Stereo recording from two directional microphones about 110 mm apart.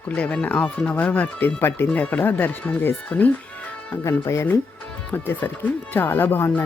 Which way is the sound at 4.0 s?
25° left (ahead or behind).